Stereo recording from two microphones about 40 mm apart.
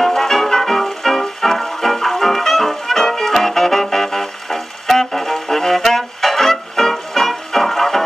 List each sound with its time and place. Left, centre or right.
0.0 s music: centre